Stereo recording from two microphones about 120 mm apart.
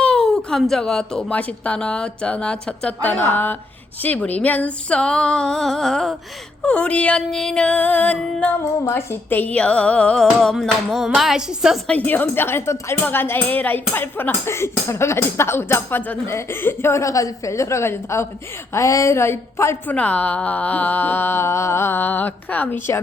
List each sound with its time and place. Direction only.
0.0 s speech: 5° left (ahead or behind)
8.6 s speech: 20° left (ahead or behind); by 11.8 s 5° right (ahead or behind)
11.9 s a woman's voice: 15° left (ahead or behind)
20.0 s speech: 10° left (ahead or behind)